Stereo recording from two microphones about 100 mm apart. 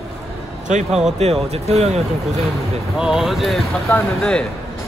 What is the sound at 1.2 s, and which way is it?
Speech, 90° right.